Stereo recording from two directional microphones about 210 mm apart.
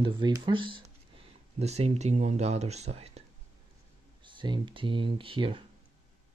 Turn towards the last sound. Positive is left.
turn(degrees=-25)  # may be behind; listen again after turning